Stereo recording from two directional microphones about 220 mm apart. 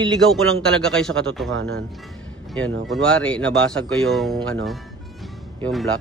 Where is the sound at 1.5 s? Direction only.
70° right (ahead or behind).